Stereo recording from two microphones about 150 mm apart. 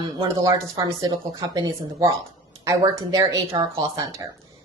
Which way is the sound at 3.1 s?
20° right (ahead or behind).